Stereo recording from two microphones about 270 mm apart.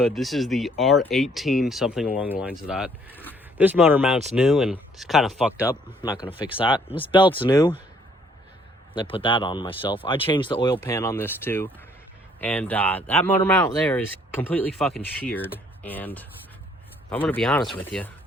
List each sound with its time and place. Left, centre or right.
0.0 s speech: centre
6.6 s speech: centre
9.0 s speech: centre